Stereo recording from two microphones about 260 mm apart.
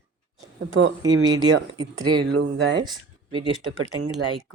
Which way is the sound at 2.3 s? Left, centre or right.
Right.